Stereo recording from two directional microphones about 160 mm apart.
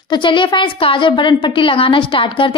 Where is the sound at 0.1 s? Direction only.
30° left (ahead or behind).